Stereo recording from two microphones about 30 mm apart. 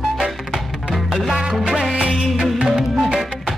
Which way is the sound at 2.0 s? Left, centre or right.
Right.